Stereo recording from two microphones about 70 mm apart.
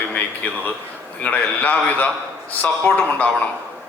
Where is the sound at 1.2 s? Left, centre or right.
Left.